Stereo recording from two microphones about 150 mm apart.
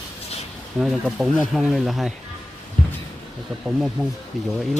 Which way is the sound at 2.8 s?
60° left (ahead or behind).